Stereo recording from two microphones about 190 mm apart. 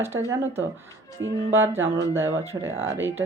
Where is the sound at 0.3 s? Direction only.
10° right (ahead or behind).